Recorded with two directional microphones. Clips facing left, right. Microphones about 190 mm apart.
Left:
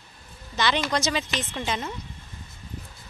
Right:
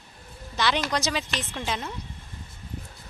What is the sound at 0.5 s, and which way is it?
A woman's voice, 5° right (ahead or behind).